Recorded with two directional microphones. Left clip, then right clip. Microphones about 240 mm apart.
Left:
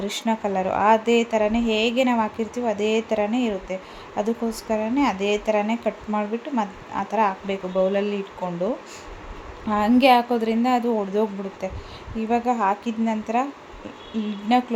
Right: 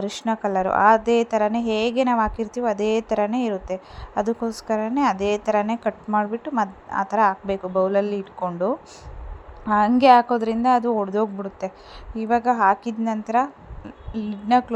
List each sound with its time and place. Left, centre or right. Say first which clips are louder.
0.0 s a woman's voice: even; right